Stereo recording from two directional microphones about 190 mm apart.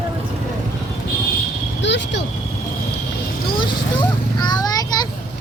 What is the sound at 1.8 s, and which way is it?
Vehicle, 65° left (ahead or behind).